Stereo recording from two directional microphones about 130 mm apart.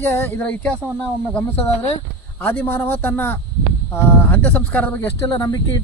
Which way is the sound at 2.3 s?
15° left (ahead or behind).